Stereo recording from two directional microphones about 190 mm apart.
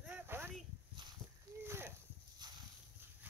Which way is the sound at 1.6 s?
15° right (ahead or behind).